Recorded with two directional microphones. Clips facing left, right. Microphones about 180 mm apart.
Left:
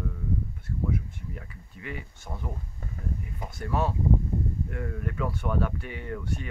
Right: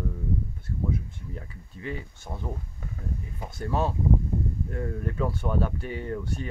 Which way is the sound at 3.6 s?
30° right (ahead or behind).